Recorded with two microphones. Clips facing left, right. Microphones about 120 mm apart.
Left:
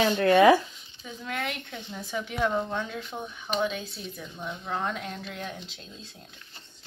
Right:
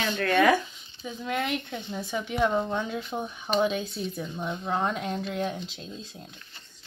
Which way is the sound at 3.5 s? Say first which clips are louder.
Right 4 dB; 20° right (ahead or behind).